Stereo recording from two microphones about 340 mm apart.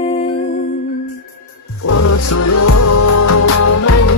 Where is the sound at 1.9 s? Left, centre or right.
Left.